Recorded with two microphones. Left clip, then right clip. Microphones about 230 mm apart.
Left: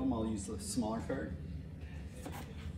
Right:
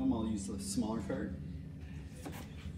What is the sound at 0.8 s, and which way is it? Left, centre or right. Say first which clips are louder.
Speech: left 1 dB; centre.